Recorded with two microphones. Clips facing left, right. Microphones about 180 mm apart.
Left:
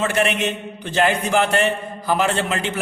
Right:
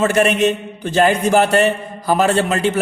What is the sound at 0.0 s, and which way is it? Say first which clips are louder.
A man's voice: right 6 dB; 40° right (ahead or behind).